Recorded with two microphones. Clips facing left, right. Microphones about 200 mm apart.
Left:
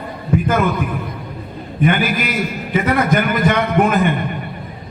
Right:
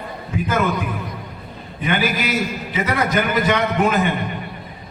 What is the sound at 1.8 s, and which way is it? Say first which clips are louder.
A man's voice: left 3 dB; 50° left (ahead or behind).